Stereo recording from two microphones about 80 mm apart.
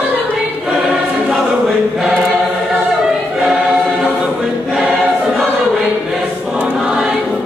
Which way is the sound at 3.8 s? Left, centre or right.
Centre.